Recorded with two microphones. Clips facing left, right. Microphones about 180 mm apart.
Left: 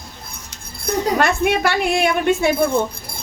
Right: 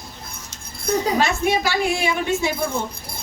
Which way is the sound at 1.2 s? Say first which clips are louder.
Left 3 dB; 55° left (ahead or behind).